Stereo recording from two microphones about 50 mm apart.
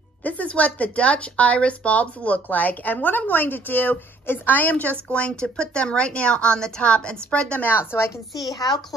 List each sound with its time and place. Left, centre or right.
0.2 s speech: left
7.6 s a woman's voice: left